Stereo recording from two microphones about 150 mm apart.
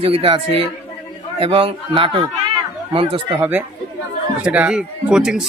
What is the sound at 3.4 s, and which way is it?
Speech, 10° right (ahead or behind).